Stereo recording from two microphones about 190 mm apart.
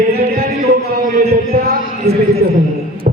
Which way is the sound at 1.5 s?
50° right (ahead or behind).